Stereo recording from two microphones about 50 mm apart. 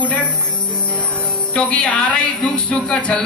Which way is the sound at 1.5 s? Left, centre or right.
Left.